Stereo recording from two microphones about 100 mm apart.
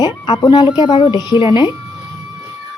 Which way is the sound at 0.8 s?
60° left (ahead or behind).